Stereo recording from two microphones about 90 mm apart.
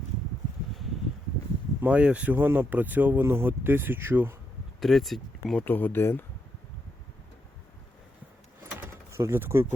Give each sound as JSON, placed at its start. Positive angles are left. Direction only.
{"t": 1.8, "sound": "speech", "side_deg": -15}
{"t": 4.8, "sound": "speech", "side_deg": 0}
{"t": 5.6, "sound": "speech", "side_deg": 20}
{"t": 9.1, "sound": "speech", "side_deg": -30}